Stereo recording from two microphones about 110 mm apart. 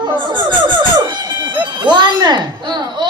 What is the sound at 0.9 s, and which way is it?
Music, 45° right (ahead or behind).